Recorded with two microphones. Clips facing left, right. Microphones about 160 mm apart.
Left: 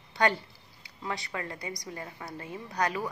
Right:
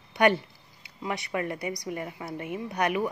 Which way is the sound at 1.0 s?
20° right (ahead or behind).